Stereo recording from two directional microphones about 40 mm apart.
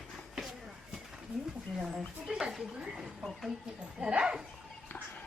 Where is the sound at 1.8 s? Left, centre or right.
Right.